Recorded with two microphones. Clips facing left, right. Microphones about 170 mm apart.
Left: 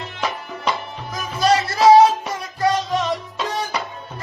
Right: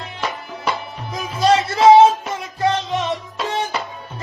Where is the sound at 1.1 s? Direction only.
25° right (ahead or behind).